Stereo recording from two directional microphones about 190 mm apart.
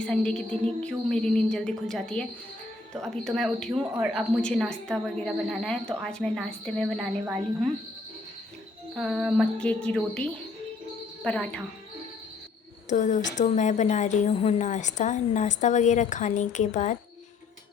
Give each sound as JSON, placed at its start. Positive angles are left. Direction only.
{"t": 0.0, "sound": "speech", "side_deg": 5}
{"t": 4.4, "sound": "speech", "side_deg": 5}
{"t": 9.0, "sound": "speech", "side_deg": 0}
{"t": 12.9, "sound": "a woman's voice", "side_deg": 40}